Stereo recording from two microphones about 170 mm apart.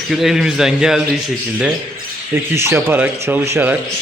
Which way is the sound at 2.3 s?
15° right (ahead or behind).